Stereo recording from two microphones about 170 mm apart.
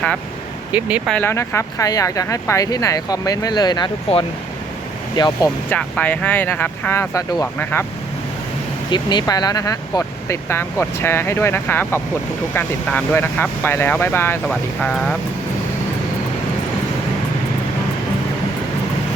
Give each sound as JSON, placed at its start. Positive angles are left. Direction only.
{"t": 0.7, "sound": "speech", "side_deg": -10}
{"t": 1.1, "sound": "speech", "side_deg": 15}
{"t": 5.7, "sound": "speech", "side_deg": 10}
{"t": 8.9, "sound": "speech", "side_deg": 25}